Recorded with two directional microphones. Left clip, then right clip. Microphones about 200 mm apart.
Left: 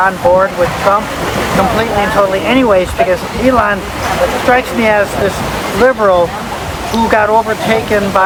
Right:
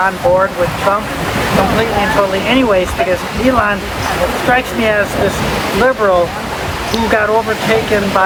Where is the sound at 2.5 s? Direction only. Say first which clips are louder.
Left 2 dB; 20° left (ahead or behind).